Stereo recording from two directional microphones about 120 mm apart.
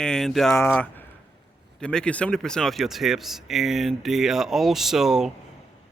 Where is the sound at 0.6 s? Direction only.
15° left (ahead or behind); by 5.3 s 5° right (ahead or behind).